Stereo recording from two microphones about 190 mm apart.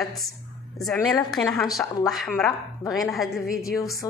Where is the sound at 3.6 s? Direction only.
15° left (ahead or behind).